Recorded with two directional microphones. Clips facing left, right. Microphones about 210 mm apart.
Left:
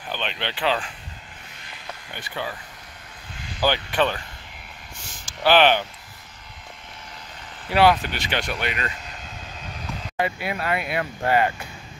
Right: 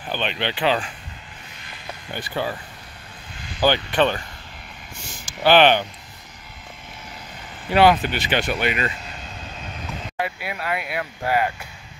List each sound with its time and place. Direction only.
0.2 s speech: 5° right (ahead or behind)
2.1 s speech: 35° right (ahead or behind)
3.6 s speech: 5° left (ahead or behind)
5.2 s speech: centre (ahead or behind)
7.7 s speech: centre (ahead or behind)
10.1 s speech: 5° right (ahead or behind)